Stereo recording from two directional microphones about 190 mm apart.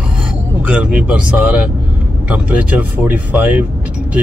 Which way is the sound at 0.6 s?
5° right (ahead or behind).